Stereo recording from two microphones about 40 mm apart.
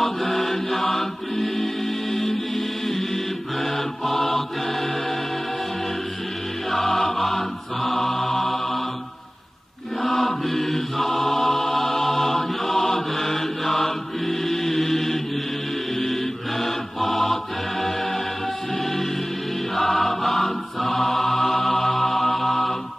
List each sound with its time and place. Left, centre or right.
0.0 s mantra: centre
3.6 s music: centre
6.9 s music: centre
7.2 s chant: centre
10.0 s chant: centre
16.0 s music: centre
19.7 s chant: centre